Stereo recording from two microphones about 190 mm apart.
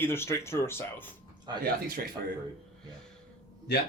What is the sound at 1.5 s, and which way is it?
Speech, 20° right (ahead or behind).